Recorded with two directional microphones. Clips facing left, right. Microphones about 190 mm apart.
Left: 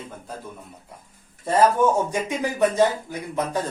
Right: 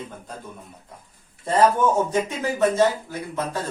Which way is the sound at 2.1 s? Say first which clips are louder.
Right 1 dB; 15° left (ahead or behind).